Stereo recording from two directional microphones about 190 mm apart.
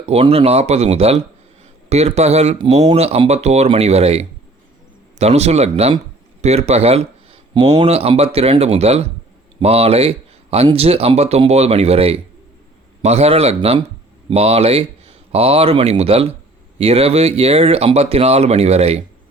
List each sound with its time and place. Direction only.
0.0 s speech: 30° right (ahead or behind)